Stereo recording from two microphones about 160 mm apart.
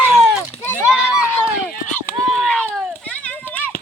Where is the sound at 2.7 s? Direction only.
5° left (ahead or behind).